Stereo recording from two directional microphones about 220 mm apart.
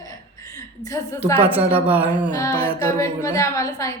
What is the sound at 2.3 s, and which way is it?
A woman's voice, 15° left (ahead or behind).